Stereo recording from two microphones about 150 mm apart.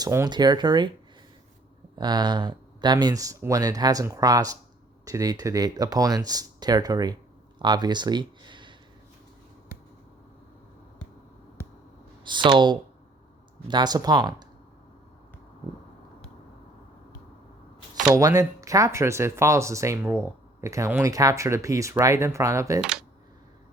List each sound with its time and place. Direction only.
0.0 s speech: 15° right (ahead or behind)
0.3 s speech: 30° right (ahead or behind)
2.0 s speech: 30° right (ahead or behind)
12.2 s speech: 30° right (ahead or behind)
18.1 s speech: 20° right (ahead or behind)
22.8 s speech: 5° right (ahead or behind)